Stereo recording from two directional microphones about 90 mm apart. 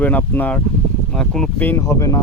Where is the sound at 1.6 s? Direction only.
25° left (ahead or behind).